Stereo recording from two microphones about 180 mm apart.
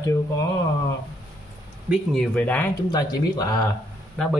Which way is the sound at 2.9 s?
20° left (ahead or behind).